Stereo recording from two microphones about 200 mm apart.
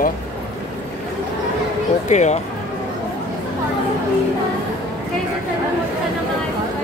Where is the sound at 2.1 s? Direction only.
35° left (ahead or behind).